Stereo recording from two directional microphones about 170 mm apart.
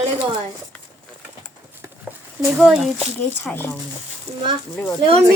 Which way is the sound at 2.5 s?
5° right (ahead or behind).